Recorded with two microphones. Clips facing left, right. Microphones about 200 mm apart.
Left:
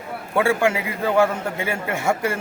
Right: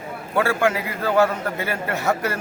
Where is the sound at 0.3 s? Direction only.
15° left (ahead or behind).